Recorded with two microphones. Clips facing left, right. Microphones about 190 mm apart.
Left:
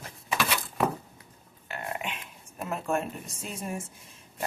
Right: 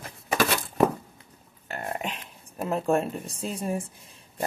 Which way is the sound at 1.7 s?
40° right (ahead or behind).